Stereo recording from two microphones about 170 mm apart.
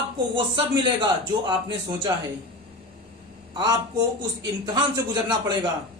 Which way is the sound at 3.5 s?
25° right (ahead or behind).